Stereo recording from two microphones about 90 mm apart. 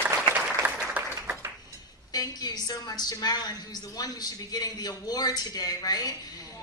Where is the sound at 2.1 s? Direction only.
45° left (ahead or behind).